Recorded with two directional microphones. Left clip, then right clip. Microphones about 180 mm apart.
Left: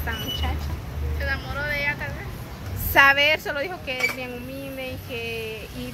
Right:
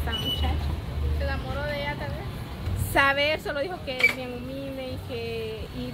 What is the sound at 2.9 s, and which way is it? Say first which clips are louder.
A woman's voice: left 6 dB; 5° left (ahead or behind).